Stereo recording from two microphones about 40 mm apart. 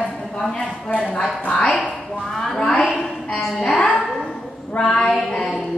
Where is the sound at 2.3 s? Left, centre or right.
Centre.